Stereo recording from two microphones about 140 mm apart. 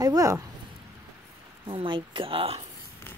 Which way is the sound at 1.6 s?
40° right (ahead or behind).